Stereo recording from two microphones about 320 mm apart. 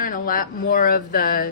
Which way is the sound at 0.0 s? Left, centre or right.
Left.